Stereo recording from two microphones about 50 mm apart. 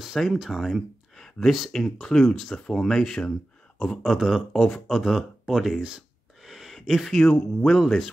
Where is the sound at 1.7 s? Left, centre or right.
Centre.